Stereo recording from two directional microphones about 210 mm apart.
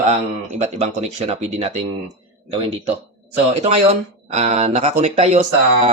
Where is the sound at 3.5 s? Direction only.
30° right (ahead or behind).